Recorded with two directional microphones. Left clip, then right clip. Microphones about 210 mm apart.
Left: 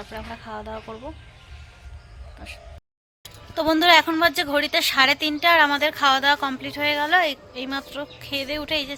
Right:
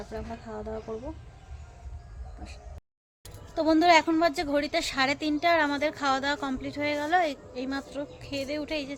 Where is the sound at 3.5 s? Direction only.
Centre (ahead or behind).